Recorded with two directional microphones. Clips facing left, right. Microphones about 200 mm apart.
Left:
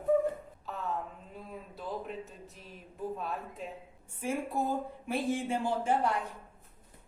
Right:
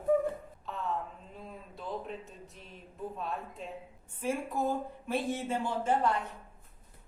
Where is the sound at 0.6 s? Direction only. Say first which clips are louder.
Right 1 dB; centre (ahead or behind).